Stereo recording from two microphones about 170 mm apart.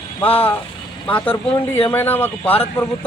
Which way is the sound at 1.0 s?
10° left (ahead or behind).